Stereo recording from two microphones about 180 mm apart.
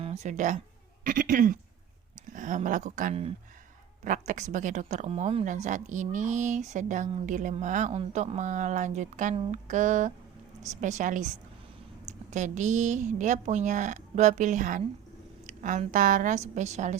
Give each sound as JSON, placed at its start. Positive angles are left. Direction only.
{"t": 0.0, "sound": "speech", "side_deg": -40}
{"t": 12.3, "sound": "speech", "side_deg": -45}